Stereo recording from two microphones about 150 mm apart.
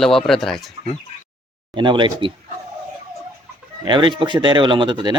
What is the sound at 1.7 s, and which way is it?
Speech, 30° right (ahead or behind).